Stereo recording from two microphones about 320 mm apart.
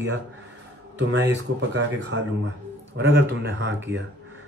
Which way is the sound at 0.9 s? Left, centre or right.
Right.